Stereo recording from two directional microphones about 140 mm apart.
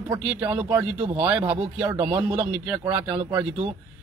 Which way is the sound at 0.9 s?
40° right (ahead or behind).